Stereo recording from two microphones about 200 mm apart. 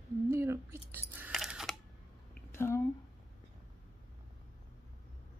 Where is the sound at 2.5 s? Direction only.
10° left (ahead or behind).